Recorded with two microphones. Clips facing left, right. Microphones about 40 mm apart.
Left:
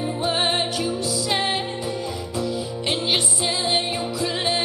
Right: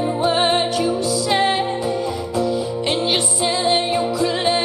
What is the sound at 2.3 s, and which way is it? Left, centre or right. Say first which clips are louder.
Music: right 6 dB; centre.